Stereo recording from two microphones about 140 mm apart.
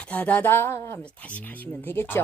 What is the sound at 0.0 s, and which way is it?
Speech, 10° left (ahead or behind).